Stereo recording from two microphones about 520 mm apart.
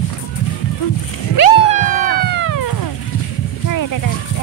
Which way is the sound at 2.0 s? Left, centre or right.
Centre.